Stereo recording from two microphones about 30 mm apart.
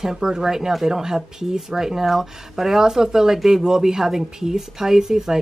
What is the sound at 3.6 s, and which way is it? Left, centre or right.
A woman's voice, centre.